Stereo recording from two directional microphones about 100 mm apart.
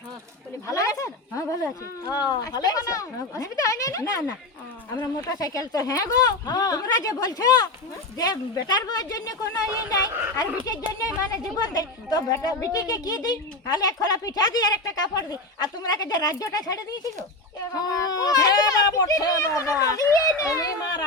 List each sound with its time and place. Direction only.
0.7 s a woman's voice: 35° left (ahead or behind)
10.1 s speech: 25° right (ahead or behind)
11.0 s a woman's voice: 35° left (ahead or behind)